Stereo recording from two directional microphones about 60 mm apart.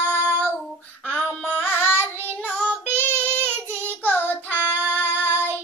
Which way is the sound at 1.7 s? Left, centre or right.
Left.